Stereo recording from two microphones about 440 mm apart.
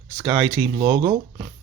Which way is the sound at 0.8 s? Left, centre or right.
Centre.